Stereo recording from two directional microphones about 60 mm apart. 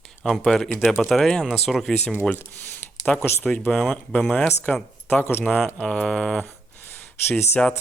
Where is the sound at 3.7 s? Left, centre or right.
Centre.